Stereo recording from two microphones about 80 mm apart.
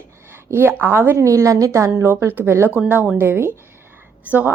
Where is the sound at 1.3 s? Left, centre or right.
Right.